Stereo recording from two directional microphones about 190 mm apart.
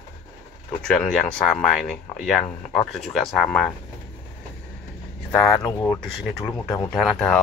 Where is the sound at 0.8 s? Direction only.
5° left (ahead or behind).